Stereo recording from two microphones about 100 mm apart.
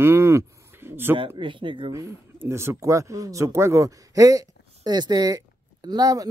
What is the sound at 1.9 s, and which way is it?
Speech, 30° right (ahead or behind).